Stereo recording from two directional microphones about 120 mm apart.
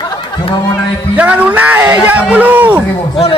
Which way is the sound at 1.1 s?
10° right (ahead or behind).